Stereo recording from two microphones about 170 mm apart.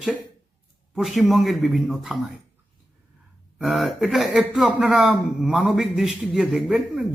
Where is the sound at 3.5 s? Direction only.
Centre (ahead or behind).